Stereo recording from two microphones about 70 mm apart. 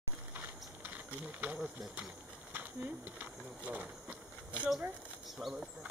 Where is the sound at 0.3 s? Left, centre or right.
Right.